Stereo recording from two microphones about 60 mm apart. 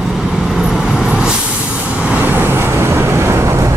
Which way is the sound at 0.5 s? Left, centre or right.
Centre.